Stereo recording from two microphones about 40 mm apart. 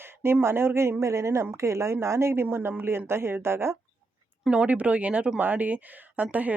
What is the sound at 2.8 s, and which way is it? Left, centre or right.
Speech, right.